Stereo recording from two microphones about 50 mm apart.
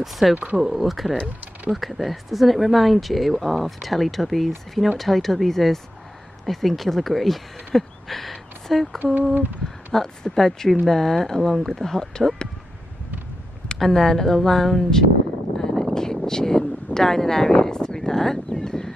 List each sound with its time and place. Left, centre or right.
0.0 s speech: centre
1.1 s speech: right
1.7 s speech: centre
9.3 s a sound: right
9.9 s speech: centre
13.7 s speech: centre
15.6 s a sound: centre